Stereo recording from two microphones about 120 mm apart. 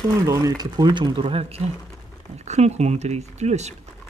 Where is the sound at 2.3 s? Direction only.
65° right (ahead or behind).